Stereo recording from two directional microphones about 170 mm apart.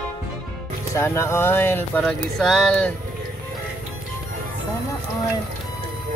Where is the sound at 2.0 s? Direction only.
Centre (ahead or behind).